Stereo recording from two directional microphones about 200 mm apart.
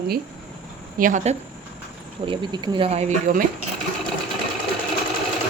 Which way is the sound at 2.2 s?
20° right (ahead or behind).